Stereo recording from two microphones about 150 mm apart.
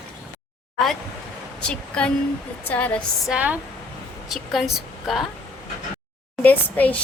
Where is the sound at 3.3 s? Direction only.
10° right (ahead or behind).